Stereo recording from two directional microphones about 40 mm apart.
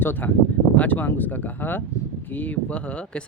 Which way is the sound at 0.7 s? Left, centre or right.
Left.